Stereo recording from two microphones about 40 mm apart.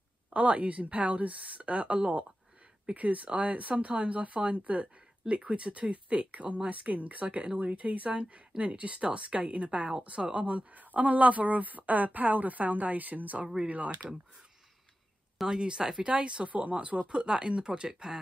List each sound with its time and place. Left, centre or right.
0.3 s a woman's voice: right
15.4 s speech: right